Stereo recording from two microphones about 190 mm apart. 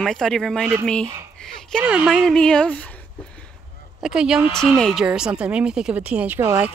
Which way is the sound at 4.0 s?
5° right (ahead or behind).